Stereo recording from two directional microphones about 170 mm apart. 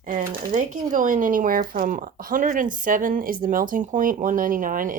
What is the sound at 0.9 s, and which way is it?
A woman's voice, 50° right (ahead or behind).